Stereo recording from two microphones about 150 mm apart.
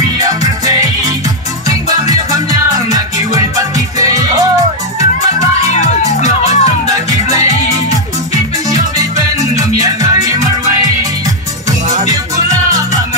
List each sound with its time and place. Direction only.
0.4 s music: 25° right (ahead or behind)
5.7 s music: 50° left (ahead or behind)
6.9 s music: 25° right (ahead or behind)
9.6 s music: 25° right (ahead or behind)
12.1 s music: 25° right (ahead or behind)